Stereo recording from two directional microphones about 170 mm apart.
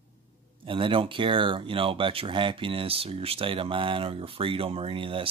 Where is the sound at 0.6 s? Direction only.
30° right (ahead or behind).